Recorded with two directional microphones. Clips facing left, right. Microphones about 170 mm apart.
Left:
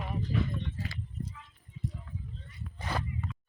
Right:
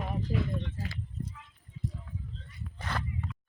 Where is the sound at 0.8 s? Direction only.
40° right (ahead or behind).